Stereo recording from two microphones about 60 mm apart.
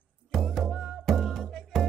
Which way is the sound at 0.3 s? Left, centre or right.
Centre.